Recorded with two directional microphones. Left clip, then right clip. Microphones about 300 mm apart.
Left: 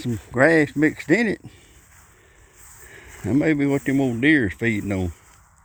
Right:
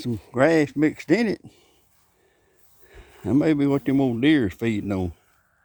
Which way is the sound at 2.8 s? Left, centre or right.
Centre.